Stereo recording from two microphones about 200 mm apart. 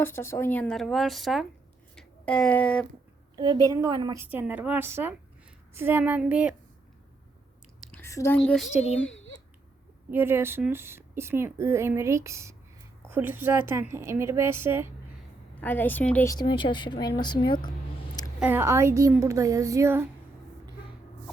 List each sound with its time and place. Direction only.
0.0 s speech: 10° left (ahead or behind)
3.3 s a woman's voice: 20° right (ahead or behind)
7.8 s a woman's voice: 5° left (ahead or behind)
10.1 s a woman's voice: 10° right (ahead or behind)
15.6 s a woman's voice: 10° left (ahead or behind)
18.3 s a woman's voice: 10° right (ahead or behind)